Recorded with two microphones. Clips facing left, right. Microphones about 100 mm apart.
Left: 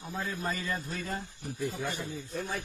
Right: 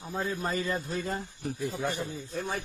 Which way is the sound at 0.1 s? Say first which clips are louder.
Right 3 dB; 30° right (ahead or behind).